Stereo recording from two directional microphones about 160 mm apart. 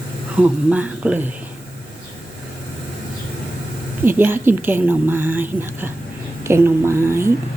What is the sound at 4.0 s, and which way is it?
A woman's voice, 15° right (ahead or behind).